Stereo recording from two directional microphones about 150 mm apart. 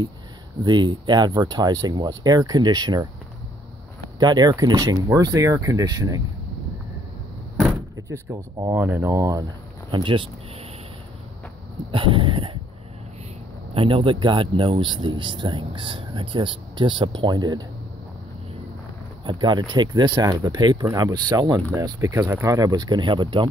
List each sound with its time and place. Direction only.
0.7 s speech: 30° right (ahead or behind)
4.2 s speech: 30° right (ahead or behind)
7.9 s speech: 20° right (ahead or behind)
9.8 s speech: 35° right (ahead or behind)
11.9 s speech: 35° right (ahead or behind)
13.7 s speech: 35° right (ahead or behind)
19.2 s speech: 30° right (ahead or behind)